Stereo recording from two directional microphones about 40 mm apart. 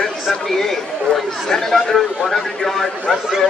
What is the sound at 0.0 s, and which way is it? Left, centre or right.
Speech, centre.